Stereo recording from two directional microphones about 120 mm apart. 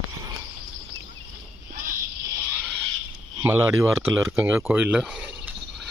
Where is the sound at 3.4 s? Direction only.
20° right (ahead or behind).